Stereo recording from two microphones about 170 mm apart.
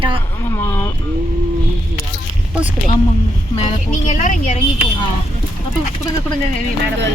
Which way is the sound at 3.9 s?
50° left (ahead or behind).